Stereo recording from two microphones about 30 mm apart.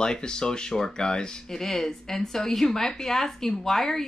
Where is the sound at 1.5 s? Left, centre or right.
Centre.